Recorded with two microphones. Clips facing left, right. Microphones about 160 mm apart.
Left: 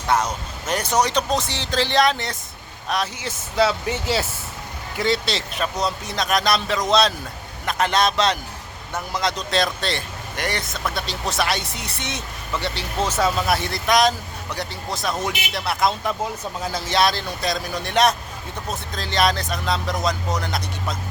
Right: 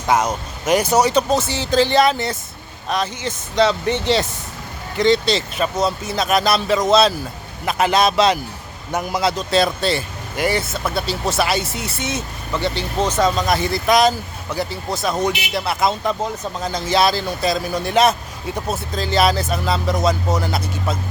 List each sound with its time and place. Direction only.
0.7 s a man's voice: 10° right (ahead or behind)
8.9 s a man's voice: 20° right (ahead or behind)
9.2 s speech: 5° right (ahead or behind)